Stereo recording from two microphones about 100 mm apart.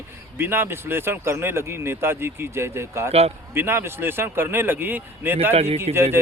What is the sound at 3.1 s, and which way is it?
Speech, 90° right.